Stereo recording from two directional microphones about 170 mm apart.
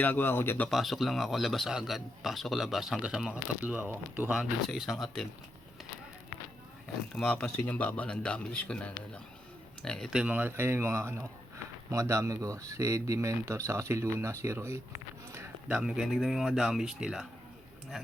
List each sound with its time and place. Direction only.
0.0 s a man's voice: 10° left (ahead or behind)
0.7 s speech: centre (ahead or behind)
7.2 s a man's voice: 5° left (ahead or behind); by 14.8 s 15° right (ahead or behind)
15.3 s a sound: 15° right (ahead or behind)
15.8 s speech: 5° right (ahead or behind)